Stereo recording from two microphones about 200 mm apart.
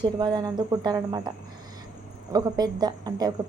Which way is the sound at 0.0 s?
20° right (ahead or behind).